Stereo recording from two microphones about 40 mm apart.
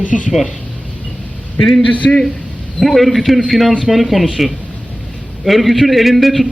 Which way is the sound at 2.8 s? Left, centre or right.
Centre.